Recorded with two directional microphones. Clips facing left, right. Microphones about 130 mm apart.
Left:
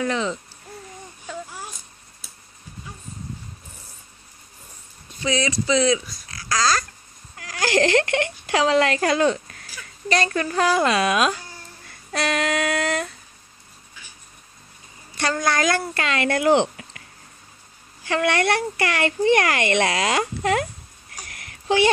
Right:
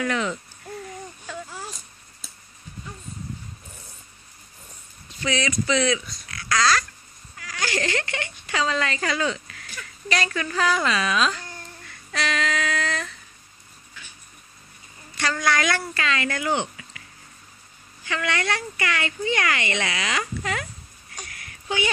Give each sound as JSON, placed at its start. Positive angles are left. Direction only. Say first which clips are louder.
{"t": 0.0, "sound": "speech", "louder": "left 1 dB", "side_deg": 30}
{"t": 1.3, "sound": "baby cry", "louder": "left 2 dB", "side_deg": 5}
{"t": 5.2, "sound": "speech", "louder": "left 2 dB", "side_deg": 35}
{"t": 6.2, "sound": "babbling", "louder": "right 2 dB", "side_deg": 35}
{"t": 7.7, "sound": "speech", "louder": "left 10 dB", "side_deg": 70}
{"t": 15.1, "sound": "a woman's voice", "louder": "left 2 dB", "side_deg": 45}
{"t": 16.3, "sound": "speech", "louder": "left 8 dB", "side_deg": 70}
{"t": 18.0, "sound": "speech", "louder": "left 6 dB", "side_deg": 55}